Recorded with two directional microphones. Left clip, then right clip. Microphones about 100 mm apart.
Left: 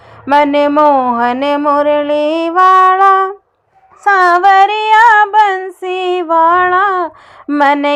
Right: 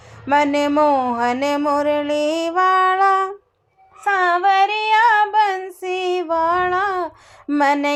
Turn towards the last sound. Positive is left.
turn(degrees=30)  # may be behind; listen again after turning